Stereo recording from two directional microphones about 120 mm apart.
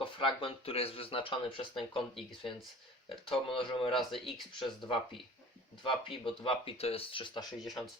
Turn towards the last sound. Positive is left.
turn(degrees=0)  # may be behind; listen again after turning